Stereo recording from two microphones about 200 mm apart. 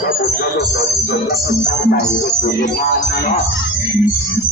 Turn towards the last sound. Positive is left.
turn(degrees=50)  # may be behind; listen again after turning